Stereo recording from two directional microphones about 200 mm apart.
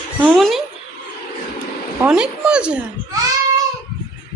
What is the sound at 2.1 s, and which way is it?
Speech, 5° right (ahead or behind).